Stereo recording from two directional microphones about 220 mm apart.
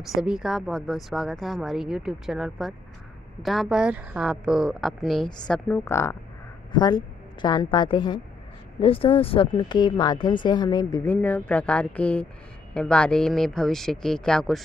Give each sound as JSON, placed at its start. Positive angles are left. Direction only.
{"t": 0.1, "sound": "a woman's voice", "side_deg": -5}
{"t": 11.1, "sound": "a woman's voice", "side_deg": 5}